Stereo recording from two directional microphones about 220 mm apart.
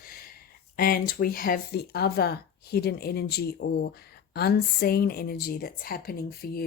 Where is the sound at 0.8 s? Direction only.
40° left (ahead or behind).